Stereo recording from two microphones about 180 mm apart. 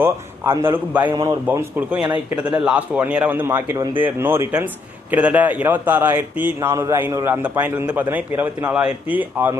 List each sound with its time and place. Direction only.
0.0 s a man's voice: 15° right (ahead or behind)
1.1 s a man's voice: 25° right (ahead or behind)
1.5 s a man's voice: 10° right (ahead or behind)